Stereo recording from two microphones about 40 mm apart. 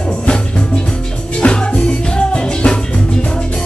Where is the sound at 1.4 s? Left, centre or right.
Left.